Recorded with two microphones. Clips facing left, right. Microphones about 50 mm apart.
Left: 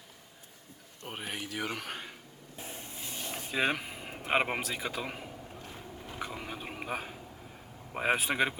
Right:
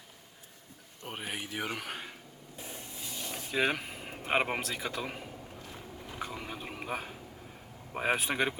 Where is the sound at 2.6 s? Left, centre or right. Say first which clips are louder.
Left 1 dB; left.